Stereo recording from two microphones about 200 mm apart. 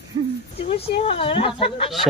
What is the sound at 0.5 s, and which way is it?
Speech, 30° left (ahead or behind).